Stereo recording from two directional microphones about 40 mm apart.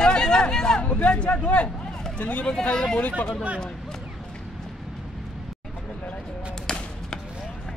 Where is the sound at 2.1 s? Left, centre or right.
Left.